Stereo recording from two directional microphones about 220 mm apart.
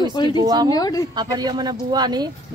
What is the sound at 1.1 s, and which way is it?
A woman's voice, 20° right (ahead or behind).